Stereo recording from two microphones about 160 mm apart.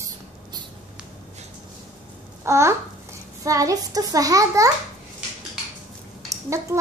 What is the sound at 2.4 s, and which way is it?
A child's voice, 20° right (ahead or behind).